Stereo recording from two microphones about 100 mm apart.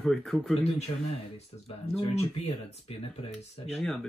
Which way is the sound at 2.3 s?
85° left.